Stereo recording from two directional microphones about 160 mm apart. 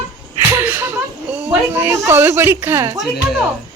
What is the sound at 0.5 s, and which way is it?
A child's voice, 15° right (ahead or behind).